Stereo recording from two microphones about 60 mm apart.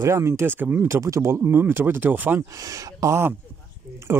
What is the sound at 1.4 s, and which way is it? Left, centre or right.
Speech, right.